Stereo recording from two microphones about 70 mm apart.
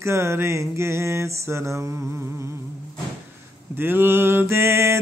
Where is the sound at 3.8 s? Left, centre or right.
Right.